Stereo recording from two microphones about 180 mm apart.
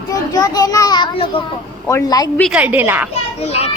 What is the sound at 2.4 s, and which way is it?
Speech, 5° right (ahead or behind).